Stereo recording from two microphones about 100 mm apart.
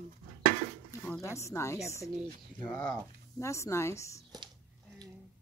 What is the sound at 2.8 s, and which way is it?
Speech, 25° left (ahead or behind).